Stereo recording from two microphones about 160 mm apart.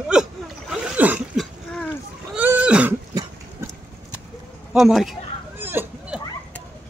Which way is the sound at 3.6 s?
15° right (ahead or behind).